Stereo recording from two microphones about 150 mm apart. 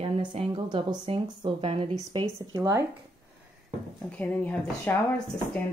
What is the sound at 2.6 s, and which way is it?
Speech, 20° right (ahead or behind).